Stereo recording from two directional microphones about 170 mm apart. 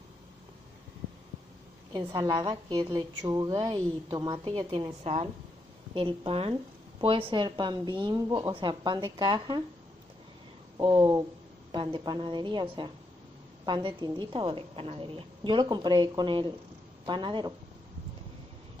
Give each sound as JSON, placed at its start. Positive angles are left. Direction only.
{"t": 1.9, "sound": "a woman's voice", "side_deg": -25}
{"t": 10.8, "sound": "a woman's voice", "side_deg": -25}